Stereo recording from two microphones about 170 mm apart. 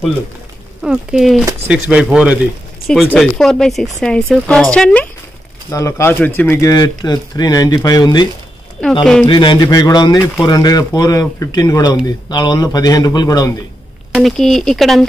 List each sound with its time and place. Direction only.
0.8 s speech: centre (ahead or behind)
5.7 s speech: 15° left (ahead or behind)
9.0 s speech: 5° left (ahead or behind)
9.3 s speech: 30° left (ahead or behind)
14.1 s speech: centre (ahead or behind)